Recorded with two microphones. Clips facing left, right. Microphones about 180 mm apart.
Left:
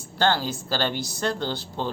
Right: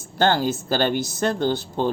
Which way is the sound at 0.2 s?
50° right (ahead or behind).